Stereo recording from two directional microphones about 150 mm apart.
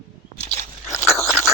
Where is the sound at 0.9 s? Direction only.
20° left (ahead or behind).